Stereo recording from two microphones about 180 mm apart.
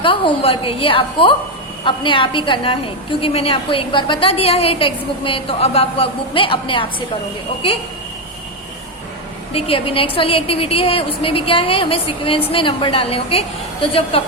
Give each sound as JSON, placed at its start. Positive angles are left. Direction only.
{"t": 0.0, "sound": "a woman's voice", "side_deg": 30}
{"t": 9.5, "sound": "a woman's voice", "side_deg": 30}